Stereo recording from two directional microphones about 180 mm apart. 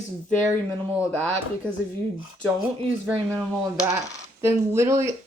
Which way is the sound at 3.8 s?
15° right (ahead or behind).